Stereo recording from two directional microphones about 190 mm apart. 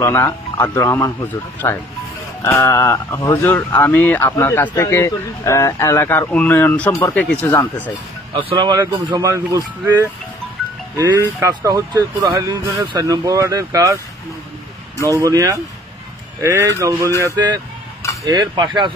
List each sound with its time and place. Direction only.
0.0 s speech: 15° left (ahead or behind)
8.4 s speech: 25° right (ahead or behind)